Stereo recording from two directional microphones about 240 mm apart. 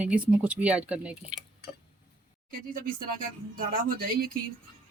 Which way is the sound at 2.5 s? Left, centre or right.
Right.